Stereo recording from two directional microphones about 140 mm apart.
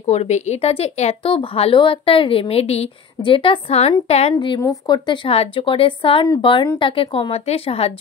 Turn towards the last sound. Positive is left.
turn(degrees=45)  # may be behind; listen again after turning